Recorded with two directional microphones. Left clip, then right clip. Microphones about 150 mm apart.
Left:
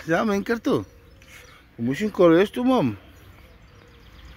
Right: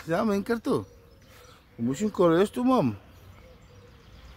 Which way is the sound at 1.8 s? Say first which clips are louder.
Left 5 dB; 10° left (ahead or behind).